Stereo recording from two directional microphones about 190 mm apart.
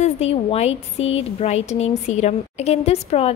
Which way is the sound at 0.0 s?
30° left (ahead or behind).